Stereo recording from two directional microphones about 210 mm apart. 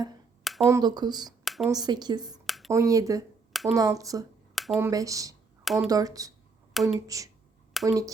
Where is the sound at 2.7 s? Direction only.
15° right (ahead or behind).